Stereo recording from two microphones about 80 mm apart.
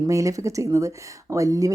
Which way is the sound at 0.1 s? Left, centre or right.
Right.